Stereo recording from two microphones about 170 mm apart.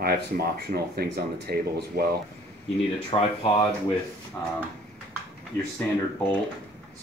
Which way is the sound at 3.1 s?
30° left (ahead or behind).